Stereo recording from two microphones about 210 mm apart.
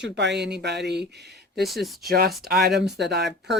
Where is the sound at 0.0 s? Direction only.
55° right (ahead or behind).